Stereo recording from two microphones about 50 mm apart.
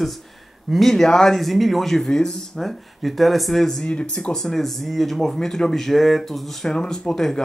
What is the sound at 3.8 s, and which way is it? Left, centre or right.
Speech, left.